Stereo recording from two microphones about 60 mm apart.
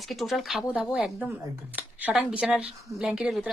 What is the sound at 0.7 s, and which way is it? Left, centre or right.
Speech, centre.